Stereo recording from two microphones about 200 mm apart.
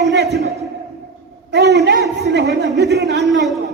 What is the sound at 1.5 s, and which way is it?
A man's voice, 55° right (ahead or behind).